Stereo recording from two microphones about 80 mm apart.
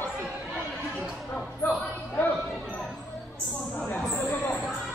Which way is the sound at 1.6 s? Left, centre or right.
Left.